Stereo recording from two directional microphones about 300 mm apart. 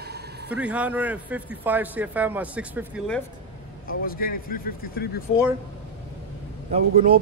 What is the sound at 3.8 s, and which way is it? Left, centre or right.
A man's voice, left.